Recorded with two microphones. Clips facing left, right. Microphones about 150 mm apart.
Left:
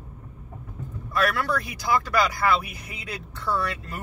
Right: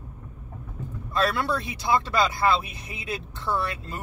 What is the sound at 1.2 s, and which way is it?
Speech, 30° right (ahead or behind).